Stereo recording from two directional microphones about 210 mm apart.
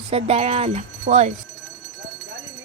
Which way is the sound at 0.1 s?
30° right (ahead or behind).